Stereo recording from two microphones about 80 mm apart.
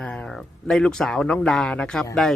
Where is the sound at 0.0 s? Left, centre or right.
Centre.